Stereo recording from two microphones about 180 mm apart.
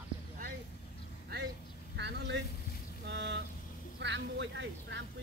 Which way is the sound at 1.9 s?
70° right (ahead or behind).